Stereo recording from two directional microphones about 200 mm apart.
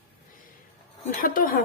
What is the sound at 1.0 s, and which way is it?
Speech, 45° left (ahead or behind).